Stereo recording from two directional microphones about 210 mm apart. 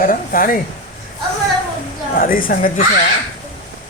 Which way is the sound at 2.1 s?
40° left (ahead or behind).